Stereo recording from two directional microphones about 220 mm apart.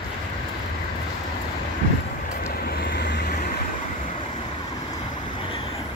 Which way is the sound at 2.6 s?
45° left (ahead or behind).